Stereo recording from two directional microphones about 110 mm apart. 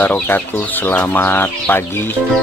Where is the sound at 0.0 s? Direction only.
15° left (ahead or behind).